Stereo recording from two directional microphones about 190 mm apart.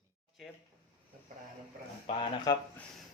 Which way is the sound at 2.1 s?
25° left (ahead or behind).